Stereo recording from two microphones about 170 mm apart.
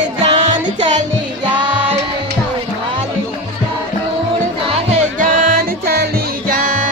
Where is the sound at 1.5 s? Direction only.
30° right (ahead or behind).